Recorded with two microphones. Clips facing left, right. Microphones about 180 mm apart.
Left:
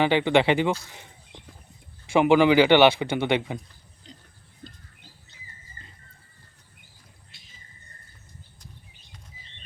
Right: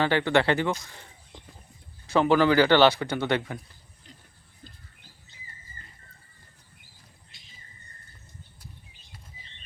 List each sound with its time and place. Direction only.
0.0 s speech: 15° left (ahead or behind)
2.1 s speech: 15° left (ahead or behind)